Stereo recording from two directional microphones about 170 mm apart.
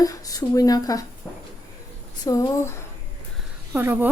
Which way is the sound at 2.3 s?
20° left (ahead or behind).